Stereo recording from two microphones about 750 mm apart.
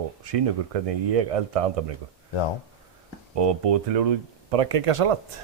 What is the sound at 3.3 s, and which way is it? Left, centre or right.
Speech, right.